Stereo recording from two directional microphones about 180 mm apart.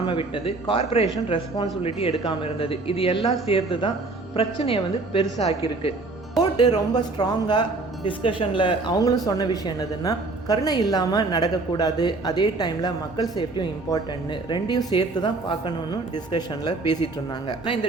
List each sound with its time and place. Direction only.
0.0 s a woman's voice: 30° left (ahead or behind)